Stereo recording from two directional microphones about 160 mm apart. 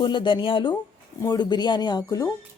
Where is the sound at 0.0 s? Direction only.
30° left (ahead or behind).